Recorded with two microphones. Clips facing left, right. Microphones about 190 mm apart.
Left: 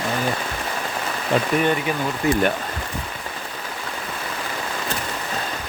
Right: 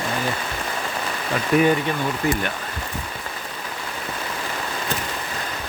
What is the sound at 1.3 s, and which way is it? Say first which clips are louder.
Speech: left 6 dB; 25° left (ahead or behind).